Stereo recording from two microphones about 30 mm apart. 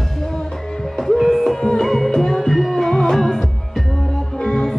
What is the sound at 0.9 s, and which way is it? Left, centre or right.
Music, centre.